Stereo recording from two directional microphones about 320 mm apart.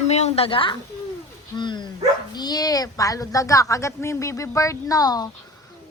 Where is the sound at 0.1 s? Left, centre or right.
Centre.